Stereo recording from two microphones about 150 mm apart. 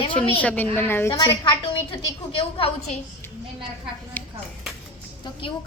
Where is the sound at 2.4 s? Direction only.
40° left (ahead or behind).